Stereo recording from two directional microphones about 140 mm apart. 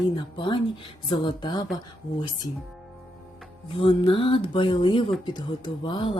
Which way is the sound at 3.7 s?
40° left (ahead or behind).